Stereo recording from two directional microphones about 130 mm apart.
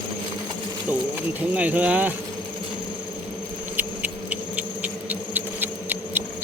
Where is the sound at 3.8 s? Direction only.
10° right (ahead or behind).